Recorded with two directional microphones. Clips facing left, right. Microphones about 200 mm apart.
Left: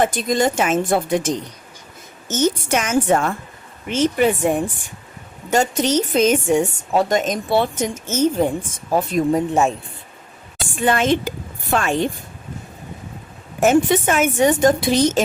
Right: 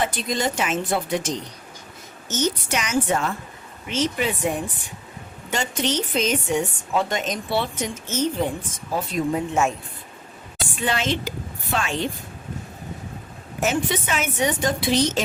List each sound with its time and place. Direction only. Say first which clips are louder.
0.0 s a woman's voice: left 6 dB; 45° left (ahead or behind)
10.8 s a woman's voice: left 7 dB; 50° left (ahead or behind)
13.6 s a woman's voice: left 8 dB; 50° left (ahead or behind)